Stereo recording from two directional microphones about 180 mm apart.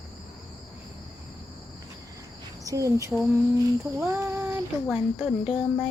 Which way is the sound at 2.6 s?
20° right (ahead or behind).